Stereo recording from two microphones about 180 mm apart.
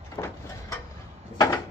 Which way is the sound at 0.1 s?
15° left (ahead or behind).